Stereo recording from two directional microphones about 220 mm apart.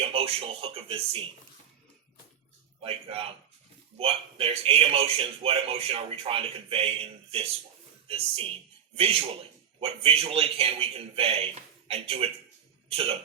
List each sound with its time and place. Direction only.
0.0 s a man's voice: 25° right (ahead or behind)
2.8 s a man's voice: 25° right (ahead or behind)